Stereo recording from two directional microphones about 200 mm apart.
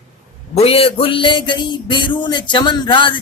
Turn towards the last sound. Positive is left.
turn(degrees=25)  # may be behind; listen again after turning